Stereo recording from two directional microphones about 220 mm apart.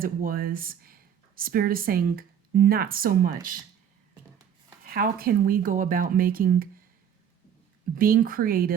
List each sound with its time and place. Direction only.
0.0 s speech: 40° right (ahead or behind)
4.9 s speech: 40° right (ahead or behind)
7.9 s speech: 40° right (ahead or behind)